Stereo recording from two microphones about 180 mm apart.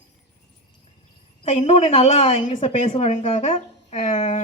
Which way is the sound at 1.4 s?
35° left (ahead or behind).